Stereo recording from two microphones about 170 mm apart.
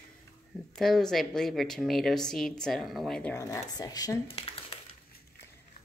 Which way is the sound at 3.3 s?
20° left (ahead or behind).